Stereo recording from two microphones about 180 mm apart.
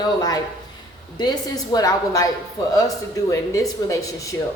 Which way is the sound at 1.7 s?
20° left (ahead or behind).